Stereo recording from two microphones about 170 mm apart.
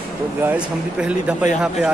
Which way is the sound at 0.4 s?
10° right (ahead or behind).